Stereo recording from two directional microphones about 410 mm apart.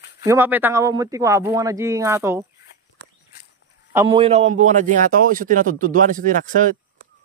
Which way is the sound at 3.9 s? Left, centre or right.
Centre.